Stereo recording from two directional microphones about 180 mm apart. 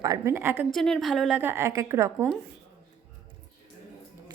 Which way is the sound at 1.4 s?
10° right (ahead or behind).